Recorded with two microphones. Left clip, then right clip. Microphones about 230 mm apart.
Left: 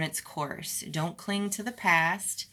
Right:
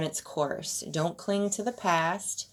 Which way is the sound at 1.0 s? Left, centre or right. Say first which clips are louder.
Right 4 dB; left.